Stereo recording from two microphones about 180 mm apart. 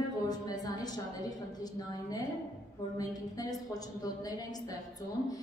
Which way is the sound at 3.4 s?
20° left (ahead or behind).